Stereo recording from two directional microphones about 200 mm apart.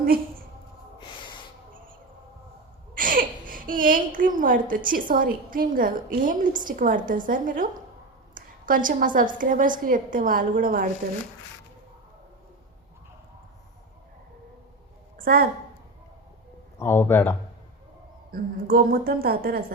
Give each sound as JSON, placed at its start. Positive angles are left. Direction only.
{"t": 0.9, "sound": "snort", "side_deg": 25}
{"t": 3.0, "sound": "a woman's voice", "side_deg": -45}
{"t": 15.2, "sound": "a woman's voice", "side_deg": -45}
{"t": 16.8, "sound": "speech", "side_deg": 10}
{"t": 18.3, "sound": "a woman's voice", "side_deg": -45}